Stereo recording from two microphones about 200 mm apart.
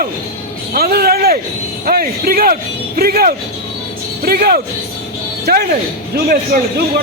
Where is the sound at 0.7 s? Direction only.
50° right (ahead or behind).